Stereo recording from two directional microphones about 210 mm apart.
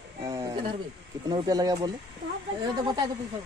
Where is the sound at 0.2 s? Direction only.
15° right (ahead or behind).